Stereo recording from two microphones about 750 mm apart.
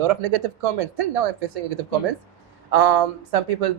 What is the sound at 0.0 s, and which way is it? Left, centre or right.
Speech, right.